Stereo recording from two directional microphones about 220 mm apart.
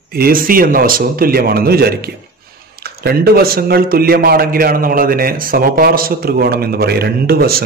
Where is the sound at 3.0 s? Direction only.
45° right (ahead or behind).